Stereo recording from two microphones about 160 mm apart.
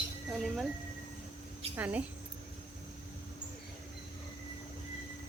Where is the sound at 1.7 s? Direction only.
10° right (ahead or behind).